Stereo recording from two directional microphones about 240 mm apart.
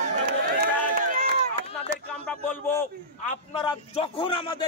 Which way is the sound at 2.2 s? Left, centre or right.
Centre.